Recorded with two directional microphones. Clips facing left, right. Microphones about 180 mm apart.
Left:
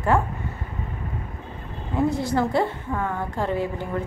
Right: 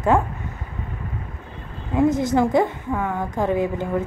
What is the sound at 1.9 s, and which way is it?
A woman's voice, 20° right (ahead or behind).